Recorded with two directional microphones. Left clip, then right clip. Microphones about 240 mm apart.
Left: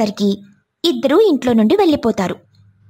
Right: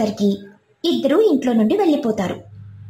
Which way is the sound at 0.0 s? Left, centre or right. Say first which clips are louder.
Left 2 dB; left.